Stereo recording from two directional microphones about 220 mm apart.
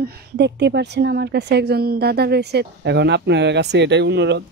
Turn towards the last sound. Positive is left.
turn(degrees=-50)  # may be behind; listen again after turning